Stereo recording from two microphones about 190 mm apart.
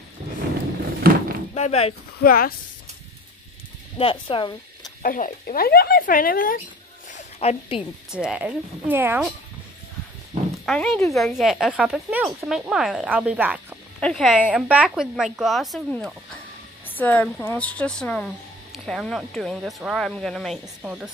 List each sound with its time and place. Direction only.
1.0 s a sound: 55° right (ahead or behind)
1.5 s speech: 35° left (ahead or behind)
2.2 s speech: 50° left (ahead or behind)
4.0 s speech: 25° left (ahead or behind)
5.0 s speech: 45° left (ahead or behind)
7.1 s a sound: 35° left (ahead or behind)
8.1 s speech: 5° right (ahead or behind)
10.6 s speech: centre (ahead or behind)